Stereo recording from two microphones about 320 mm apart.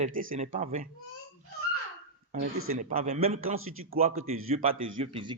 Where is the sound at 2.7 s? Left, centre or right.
Right.